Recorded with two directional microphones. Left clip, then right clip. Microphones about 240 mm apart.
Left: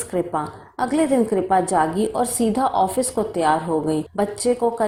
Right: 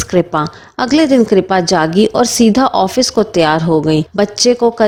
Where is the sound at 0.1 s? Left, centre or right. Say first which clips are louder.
Right 9 dB; right.